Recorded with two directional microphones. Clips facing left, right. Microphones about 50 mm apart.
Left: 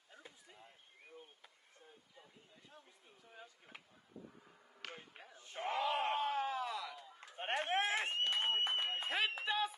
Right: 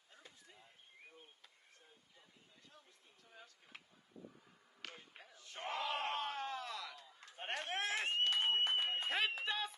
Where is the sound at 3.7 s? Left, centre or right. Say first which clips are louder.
Left 1 dB; centre.